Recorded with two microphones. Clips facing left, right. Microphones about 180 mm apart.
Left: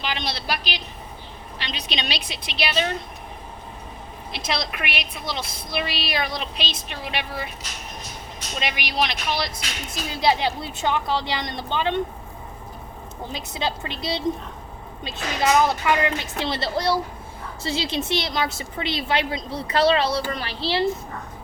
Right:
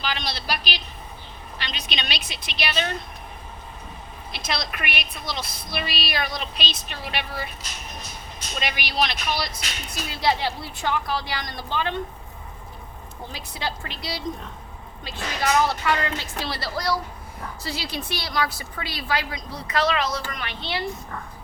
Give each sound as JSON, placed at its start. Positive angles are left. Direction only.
{"t": 0.0, "sound": "a sound", "side_deg": 20}
{"t": 1.6, "sound": "a woman's voice", "side_deg": 30}
{"t": 4.3, "sound": "a woman's voice", "side_deg": 25}
{"t": 8.6, "sound": "a woman's voice", "side_deg": 20}
{"t": 13.3, "sound": "a woman's voice", "side_deg": 20}